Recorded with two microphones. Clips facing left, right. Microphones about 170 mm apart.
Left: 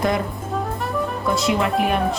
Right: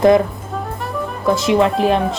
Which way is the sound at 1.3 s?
20° right (ahead or behind).